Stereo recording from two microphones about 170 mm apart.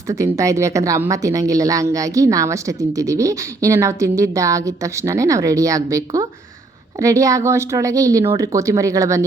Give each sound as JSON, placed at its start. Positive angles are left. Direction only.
{"t": 0.1, "sound": "a woman's voice", "side_deg": -20}